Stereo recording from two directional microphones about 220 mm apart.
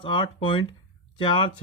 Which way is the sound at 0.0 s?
20° left (ahead or behind).